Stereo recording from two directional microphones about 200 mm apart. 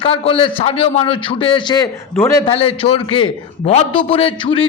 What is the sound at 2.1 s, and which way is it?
Speech, 10° left (ahead or behind).